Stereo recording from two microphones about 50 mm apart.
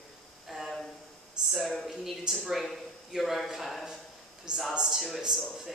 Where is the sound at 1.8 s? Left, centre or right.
Centre.